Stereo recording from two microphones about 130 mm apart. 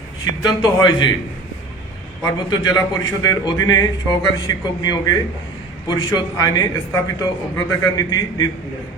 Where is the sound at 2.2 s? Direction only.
25° left (ahead or behind).